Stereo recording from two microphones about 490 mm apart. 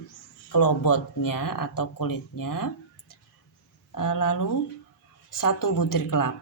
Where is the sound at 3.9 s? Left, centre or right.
Left.